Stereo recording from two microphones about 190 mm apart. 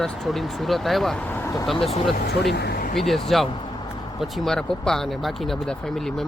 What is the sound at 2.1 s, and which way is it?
Speech, 60° left (ahead or behind).